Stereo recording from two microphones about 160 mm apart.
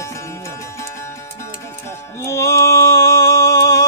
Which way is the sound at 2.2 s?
15° left (ahead or behind).